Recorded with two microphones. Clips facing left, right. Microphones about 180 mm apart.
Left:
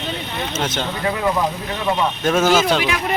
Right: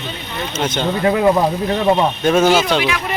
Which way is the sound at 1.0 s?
30° right (ahead or behind).